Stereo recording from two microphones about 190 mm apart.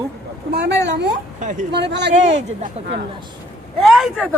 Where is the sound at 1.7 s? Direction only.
65° right (ahead or behind).